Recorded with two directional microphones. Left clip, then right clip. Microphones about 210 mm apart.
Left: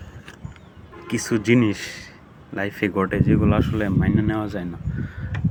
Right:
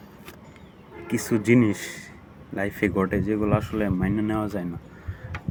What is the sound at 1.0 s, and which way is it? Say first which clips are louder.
Speech: left 2 dB; 5° right (ahead or behind).